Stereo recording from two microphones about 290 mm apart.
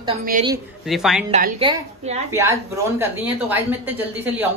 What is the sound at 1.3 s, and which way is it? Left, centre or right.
Speech, centre.